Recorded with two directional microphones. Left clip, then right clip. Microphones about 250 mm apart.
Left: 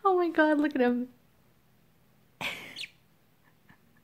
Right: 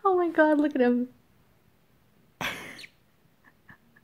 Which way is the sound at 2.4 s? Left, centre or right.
Right.